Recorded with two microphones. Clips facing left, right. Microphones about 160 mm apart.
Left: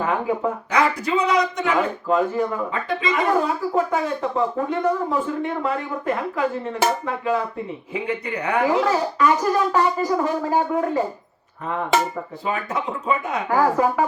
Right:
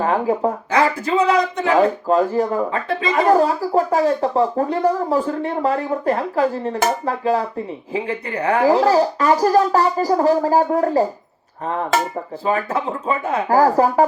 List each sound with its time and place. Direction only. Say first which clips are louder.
0.0 s speech: right 4 dB; 35° right (ahead or behind)
12.5 s speech: right 5 dB; 35° right (ahead or behind)